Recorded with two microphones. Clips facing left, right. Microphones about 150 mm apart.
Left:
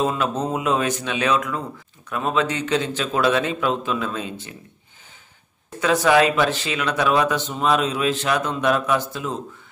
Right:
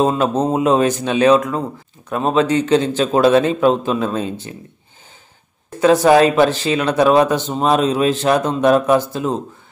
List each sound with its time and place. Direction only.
0.0 s speech: 30° right (ahead or behind)
5.8 s speech: 35° right (ahead or behind)